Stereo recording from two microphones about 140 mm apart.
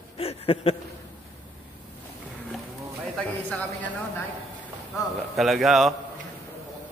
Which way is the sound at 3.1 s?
5° left (ahead or behind).